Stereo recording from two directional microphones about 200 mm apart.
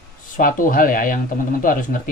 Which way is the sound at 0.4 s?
45° left (ahead or behind).